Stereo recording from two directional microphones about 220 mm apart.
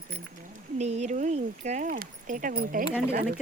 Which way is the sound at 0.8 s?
30° right (ahead or behind).